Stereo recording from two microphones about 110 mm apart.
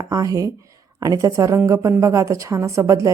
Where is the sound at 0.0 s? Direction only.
30° right (ahead or behind).